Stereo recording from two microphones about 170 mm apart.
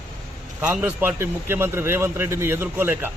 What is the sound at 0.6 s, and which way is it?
A man's voice, 10° right (ahead or behind).